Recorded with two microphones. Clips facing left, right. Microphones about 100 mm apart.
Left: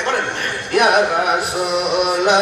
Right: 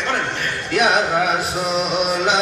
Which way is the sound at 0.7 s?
55° left (ahead or behind).